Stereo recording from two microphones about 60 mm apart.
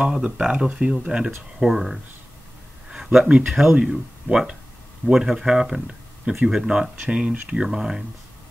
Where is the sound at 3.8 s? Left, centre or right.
Centre.